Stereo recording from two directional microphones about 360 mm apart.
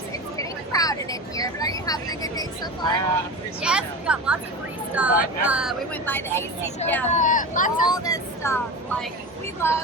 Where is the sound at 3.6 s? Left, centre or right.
Centre.